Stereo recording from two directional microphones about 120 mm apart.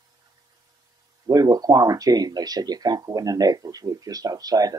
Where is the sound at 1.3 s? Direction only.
35° right (ahead or behind).